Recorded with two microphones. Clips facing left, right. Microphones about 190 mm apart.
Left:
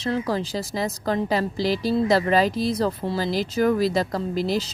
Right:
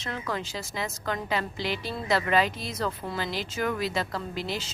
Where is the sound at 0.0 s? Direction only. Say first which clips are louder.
Left 8 dB; 35° left (ahead or behind).